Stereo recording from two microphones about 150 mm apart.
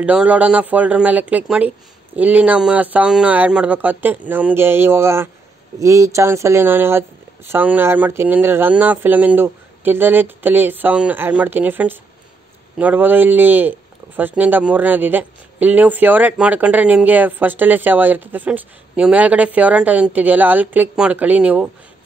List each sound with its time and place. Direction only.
0.0 s speech: 10° right (ahead or behind)